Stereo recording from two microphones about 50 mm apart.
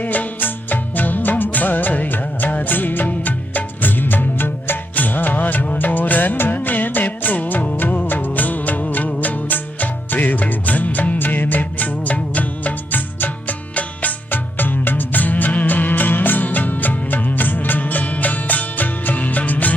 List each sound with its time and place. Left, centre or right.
0.0 s music of bollywood: left